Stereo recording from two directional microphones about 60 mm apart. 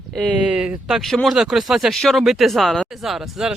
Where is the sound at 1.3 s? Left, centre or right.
Centre.